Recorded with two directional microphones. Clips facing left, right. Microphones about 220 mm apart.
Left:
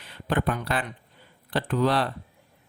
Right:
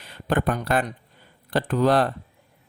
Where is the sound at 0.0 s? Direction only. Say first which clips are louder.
Right 3 dB; 45° right (ahead or behind).